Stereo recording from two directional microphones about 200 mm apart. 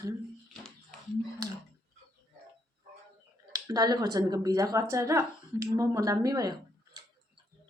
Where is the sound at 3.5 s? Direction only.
20° right (ahead or behind).